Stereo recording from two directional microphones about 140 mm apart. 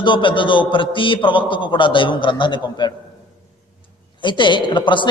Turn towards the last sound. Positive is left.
turn(degrees=35)  # may be behind; listen again after turning